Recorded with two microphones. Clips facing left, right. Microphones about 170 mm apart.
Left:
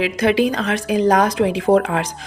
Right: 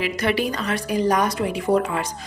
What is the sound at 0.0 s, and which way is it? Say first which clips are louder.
Speech: left 6 dB; 90° left.